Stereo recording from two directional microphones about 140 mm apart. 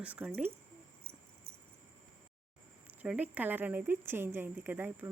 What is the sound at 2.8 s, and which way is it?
Speech, 10° right (ahead or behind).